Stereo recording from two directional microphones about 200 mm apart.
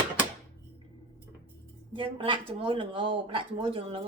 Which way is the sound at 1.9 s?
25° right (ahead or behind).